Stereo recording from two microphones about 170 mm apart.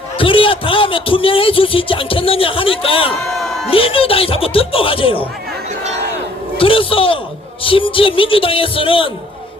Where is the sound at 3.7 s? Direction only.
30° left (ahead or behind).